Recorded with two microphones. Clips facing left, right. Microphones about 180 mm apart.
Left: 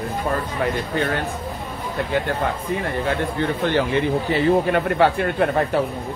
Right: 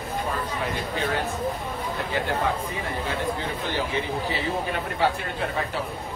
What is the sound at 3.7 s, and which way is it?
A man's voice, 60° left (ahead or behind).